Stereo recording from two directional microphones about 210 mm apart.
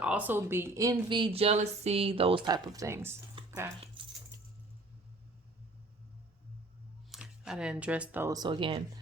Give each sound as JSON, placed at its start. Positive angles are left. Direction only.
{"t": 0.0, "sound": "speech", "side_deg": -5}
{"t": 4.0, "sound": "keys jangling", "side_deg": -25}
{"t": 7.1, "sound": "speech", "side_deg": -5}